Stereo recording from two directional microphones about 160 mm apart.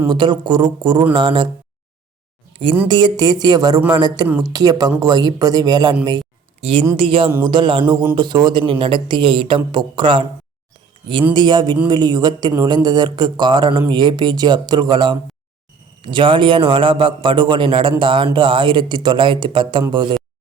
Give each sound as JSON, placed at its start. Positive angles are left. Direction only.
{"t": 0.1, "sound": "speech", "side_deg": -30}
{"t": 2.8, "sound": "speech", "side_deg": -30}
{"t": 6.6, "sound": "a man's voice", "side_deg": -35}
{"t": 11.3, "sound": "a man's voice", "side_deg": -30}